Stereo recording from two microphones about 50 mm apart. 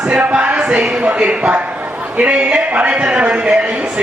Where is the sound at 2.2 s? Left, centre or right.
Right.